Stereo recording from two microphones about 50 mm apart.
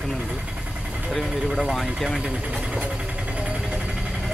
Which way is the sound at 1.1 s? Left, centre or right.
Centre.